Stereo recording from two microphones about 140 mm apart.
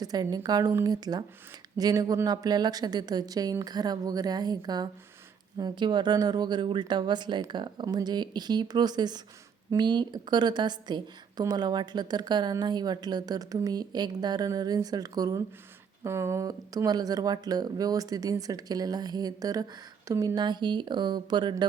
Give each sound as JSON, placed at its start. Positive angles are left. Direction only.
{"t": 0.0, "sound": "speech", "side_deg": -25}